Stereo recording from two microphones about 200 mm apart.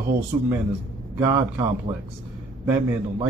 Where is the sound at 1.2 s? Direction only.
15° right (ahead or behind).